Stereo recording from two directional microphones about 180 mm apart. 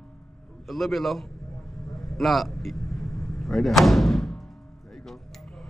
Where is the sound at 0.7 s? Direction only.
Centre (ahead or behind).